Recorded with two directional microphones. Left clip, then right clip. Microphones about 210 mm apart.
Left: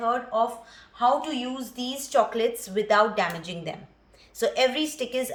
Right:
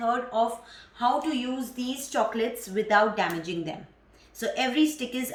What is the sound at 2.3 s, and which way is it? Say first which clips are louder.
A woman's voice: left 3 dB; 55° left (ahead or behind).